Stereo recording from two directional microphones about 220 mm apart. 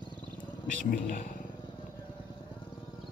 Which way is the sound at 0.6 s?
35° left (ahead or behind).